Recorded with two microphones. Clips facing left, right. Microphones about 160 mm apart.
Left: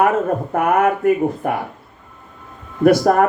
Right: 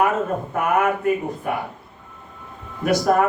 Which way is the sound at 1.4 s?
50° left (ahead or behind).